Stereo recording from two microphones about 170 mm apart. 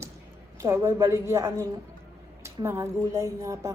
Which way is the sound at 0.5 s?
15° right (ahead or behind).